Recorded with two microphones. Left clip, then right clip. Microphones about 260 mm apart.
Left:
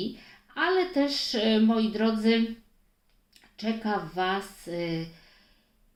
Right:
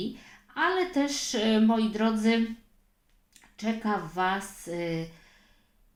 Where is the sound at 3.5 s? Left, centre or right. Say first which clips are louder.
Even; right.